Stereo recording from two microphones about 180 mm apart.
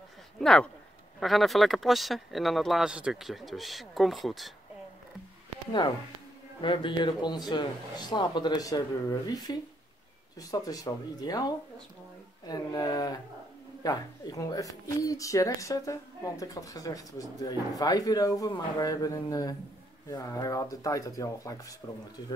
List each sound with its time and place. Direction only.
0.4 s speech: centre (ahead or behind)
6.6 s speech: 25° left (ahead or behind)